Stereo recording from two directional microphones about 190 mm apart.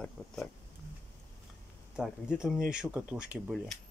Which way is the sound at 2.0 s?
5° right (ahead or behind).